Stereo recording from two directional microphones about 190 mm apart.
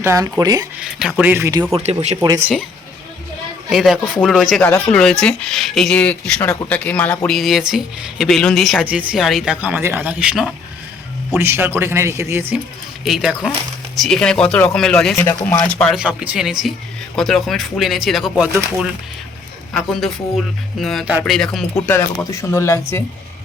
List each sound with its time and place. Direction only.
0.0 s a man's voice: 15° right (ahead or behind)
0.8 s speech: 5° right (ahead or behind)
1.7 s speech: 35° right (ahead or behind)
3.7 s a man's voice: centre (ahead or behind)
13.1 s speech: centre (ahead or behind)
16.0 s speech: 5° right (ahead or behind)
21.8 s speech: 15° left (ahead or behind)